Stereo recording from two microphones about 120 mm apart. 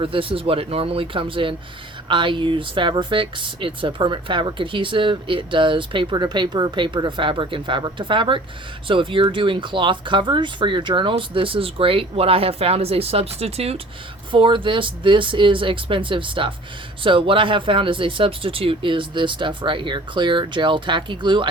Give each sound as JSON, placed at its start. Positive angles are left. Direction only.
{"t": 0.0, "sound": "speech", "side_deg": -50}
{"t": 14.3, "sound": "speech", "side_deg": -45}